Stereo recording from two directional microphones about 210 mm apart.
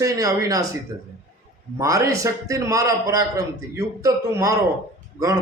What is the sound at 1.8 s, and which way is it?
A man's voice, 15° right (ahead or behind).